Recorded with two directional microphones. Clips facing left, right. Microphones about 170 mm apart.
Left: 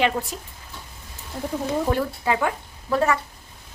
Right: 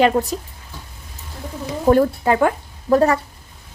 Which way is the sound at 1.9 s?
45° right (ahead or behind).